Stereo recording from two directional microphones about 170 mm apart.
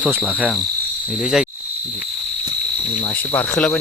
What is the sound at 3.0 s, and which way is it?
Cricket, 10° left (ahead or behind).